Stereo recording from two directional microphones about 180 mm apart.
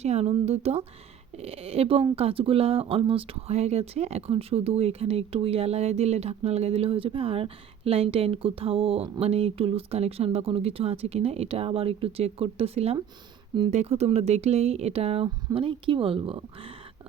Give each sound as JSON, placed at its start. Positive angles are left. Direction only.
{"t": 0.0, "sound": "speech", "side_deg": -35}